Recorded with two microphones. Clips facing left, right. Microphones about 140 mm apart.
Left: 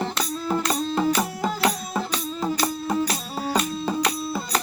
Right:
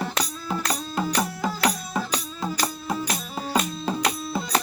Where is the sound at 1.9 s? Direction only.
Centre (ahead or behind).